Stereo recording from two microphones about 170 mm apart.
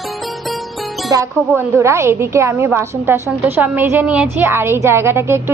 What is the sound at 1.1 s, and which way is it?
A woman's voice, 20° right (ahead or behind).